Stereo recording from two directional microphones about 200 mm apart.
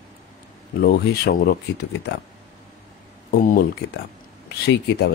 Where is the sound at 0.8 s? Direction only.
50° left (ahead or behind).